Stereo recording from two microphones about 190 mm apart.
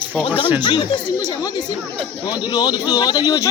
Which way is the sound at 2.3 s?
20° left (ahead or behind).